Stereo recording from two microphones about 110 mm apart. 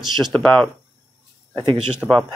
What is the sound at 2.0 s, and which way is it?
Speech, 15° right (ahead or behind).